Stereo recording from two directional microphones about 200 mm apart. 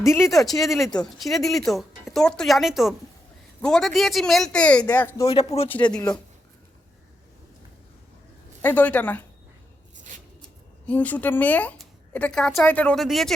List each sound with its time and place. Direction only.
0.0 s speech: 15° left (ahead or behind)
0.3 s speech: centre (ahead or behind)
5.3 s speech: 30° left (ahead or behind)
5.6 s a woman's voice: 5° left (ahead or behind)
8.6 s a woman's voice: 10° left (ahead or behind)
10.8 s a woman's voice: 10° left (ahead or behind)